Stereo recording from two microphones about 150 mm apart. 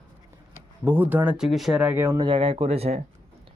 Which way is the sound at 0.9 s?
10° right (ahead or behind).